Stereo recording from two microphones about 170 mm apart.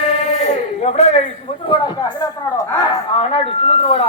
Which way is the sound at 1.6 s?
25° left (ahead or behind).